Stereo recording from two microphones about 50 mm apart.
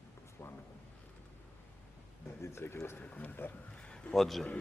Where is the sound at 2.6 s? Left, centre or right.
Left.